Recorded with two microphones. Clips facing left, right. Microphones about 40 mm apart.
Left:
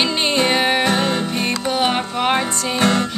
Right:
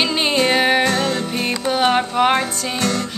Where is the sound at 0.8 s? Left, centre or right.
Left.